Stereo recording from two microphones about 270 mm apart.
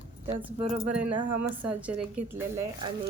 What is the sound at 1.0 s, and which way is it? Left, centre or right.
Speech, right.